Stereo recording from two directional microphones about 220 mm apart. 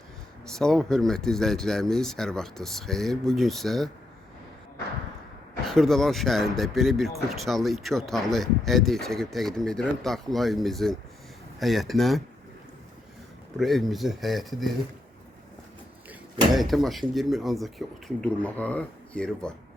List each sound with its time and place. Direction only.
0.4 s speech: centre (ahead or behind)
5.6 s speech: centre (ahead or behind)
13.6 s speech: centre (ahead or behind)
16.5 s speech: centre (ahead or behind)